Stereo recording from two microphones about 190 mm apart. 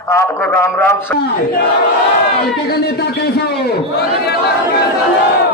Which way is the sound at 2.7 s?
55° left (ahead or behind).